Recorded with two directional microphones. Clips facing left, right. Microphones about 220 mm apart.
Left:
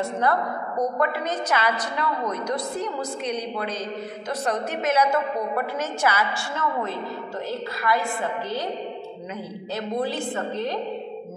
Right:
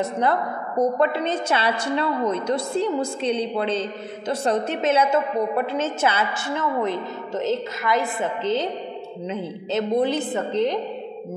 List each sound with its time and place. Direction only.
0.0 s a woman's voice: 20° right (ahead or behind)